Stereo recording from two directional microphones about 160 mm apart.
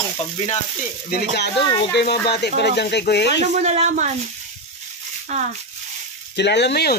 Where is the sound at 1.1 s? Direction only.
75° left (ahead or behind).